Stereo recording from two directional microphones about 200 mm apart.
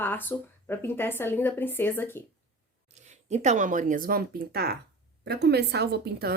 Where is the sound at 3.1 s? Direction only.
35° right (ahead or behind).